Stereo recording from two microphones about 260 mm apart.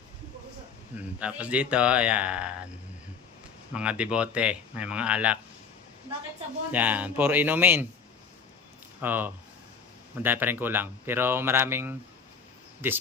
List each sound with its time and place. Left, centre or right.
1.2 s speech: centre
3.8 s speech: centre
6.7 s speech: centre
9.0 s speech: centre